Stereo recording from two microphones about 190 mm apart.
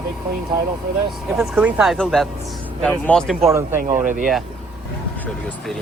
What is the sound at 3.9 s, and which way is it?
Speech, 45° right (ahead or behind).